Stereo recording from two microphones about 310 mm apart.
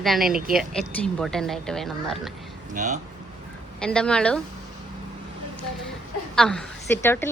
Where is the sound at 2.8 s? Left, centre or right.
Right.